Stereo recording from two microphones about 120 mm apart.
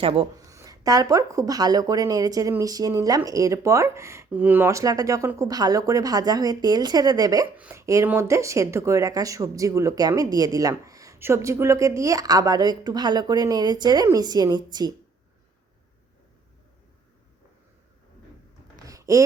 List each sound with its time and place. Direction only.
0.0 s speech: 50° right (ahead or behind)
0.3 s speech: 25° right (ahead or behind)
7.5 s speech: 10° right (ahead or behind)
7.8 s speech: 25° right (ahead or behind)
18.9 s a sound: 30° right (ahead or behind)